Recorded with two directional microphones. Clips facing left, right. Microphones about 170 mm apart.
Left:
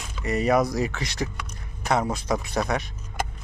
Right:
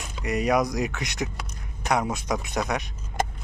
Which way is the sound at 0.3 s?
Centre (ahead or behind).